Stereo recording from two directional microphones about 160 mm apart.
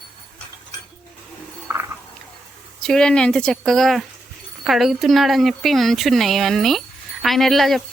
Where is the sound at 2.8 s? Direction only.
5° left (ahead or behind).